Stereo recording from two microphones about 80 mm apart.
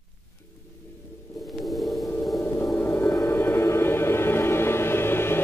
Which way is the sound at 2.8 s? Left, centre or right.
Left.